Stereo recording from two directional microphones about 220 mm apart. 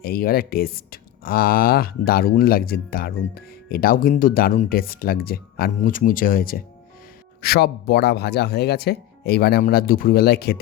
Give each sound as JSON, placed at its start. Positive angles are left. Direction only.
{"t": 0.0, "sound": "speech", "side_deg": 45}